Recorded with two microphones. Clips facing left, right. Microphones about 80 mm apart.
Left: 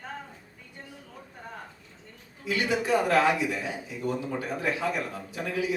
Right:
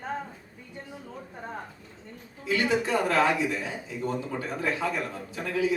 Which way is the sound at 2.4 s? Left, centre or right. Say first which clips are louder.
Right 2 dB; right.